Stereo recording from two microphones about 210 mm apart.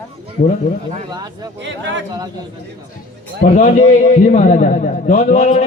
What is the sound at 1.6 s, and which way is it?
Speech, 60° right (ahead or behind).